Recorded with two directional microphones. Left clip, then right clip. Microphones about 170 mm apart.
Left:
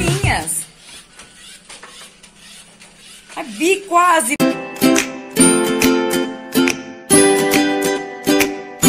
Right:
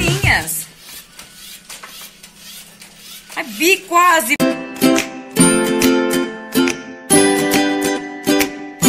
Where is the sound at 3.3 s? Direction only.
10° left (ahead or behind).